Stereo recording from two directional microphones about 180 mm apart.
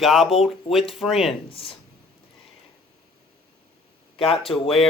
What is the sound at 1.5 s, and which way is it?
Speech, 30° left (ahead or behind).